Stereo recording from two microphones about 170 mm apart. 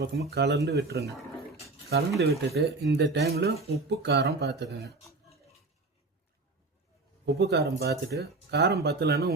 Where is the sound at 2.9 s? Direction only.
80° right.